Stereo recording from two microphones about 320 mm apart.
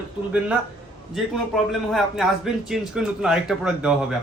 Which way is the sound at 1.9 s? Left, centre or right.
Centre.